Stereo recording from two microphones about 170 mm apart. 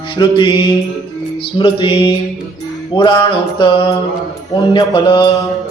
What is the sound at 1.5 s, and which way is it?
Mantra, 30° left (ahead or behind).